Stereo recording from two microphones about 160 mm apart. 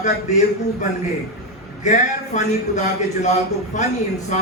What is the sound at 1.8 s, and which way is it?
A man's voice, 50° left (ahead or behind).